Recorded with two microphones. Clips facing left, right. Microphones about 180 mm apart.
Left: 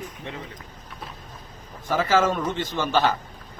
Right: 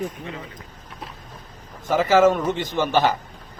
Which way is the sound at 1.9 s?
15° right (ahead or behind).